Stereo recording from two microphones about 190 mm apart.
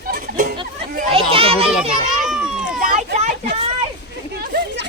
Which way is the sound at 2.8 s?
35° right (ahead or behind).